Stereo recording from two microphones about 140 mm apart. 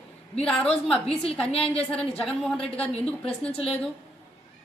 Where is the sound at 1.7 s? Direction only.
10° left (ahead or behind).